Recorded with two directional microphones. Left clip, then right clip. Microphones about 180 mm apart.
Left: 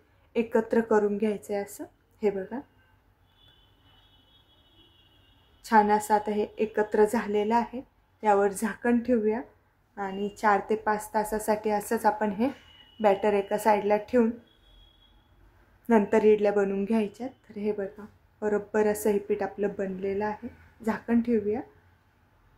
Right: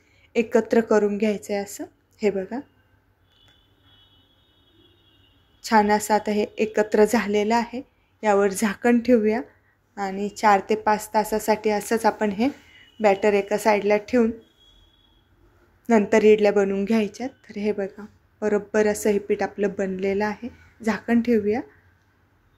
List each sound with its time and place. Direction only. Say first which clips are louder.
0.3 s a woman's voice: right 5 dB; 10° right (ahead or behind)
5.6 s a woman's voice: right 3 dB; 10° right (ahead or behind)
15.9 s a woman's voice: right 5 dB; 10° right (ahead or behind)